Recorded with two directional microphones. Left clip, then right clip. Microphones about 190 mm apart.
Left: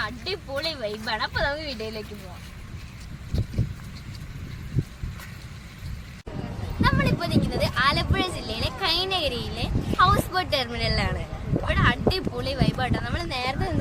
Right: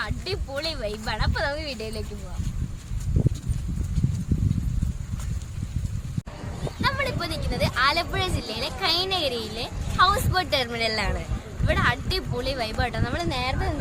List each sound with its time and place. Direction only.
0.0 s speech: 10° right (ahead or behind)
6.7 s speech: 10° right (ahead or behind)